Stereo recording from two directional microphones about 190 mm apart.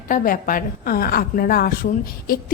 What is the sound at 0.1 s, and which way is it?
A woman's voice, 45° left (ahead or behind).